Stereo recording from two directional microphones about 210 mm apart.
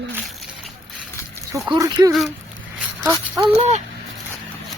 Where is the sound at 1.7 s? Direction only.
20° right (ahead or behind).